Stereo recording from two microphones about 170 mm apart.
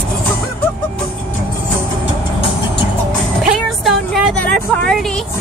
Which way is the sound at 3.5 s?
Centre (ahead or behind).